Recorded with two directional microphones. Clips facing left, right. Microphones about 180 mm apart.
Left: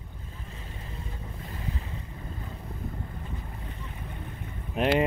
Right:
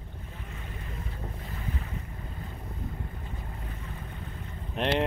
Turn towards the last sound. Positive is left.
turn(degrees=5)  # may be behind; listen again after turning